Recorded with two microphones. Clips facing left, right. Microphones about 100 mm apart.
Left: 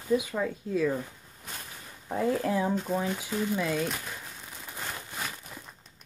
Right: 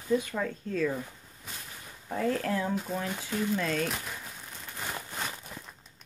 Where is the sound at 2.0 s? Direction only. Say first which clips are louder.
Left 2 dB; 15° left (ahead or behind).